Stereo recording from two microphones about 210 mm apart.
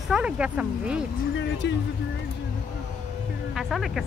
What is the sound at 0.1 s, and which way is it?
Speech, 5° right (ahead or behind).